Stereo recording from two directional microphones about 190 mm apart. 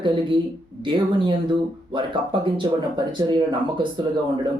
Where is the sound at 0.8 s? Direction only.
25° right (ahead or behind).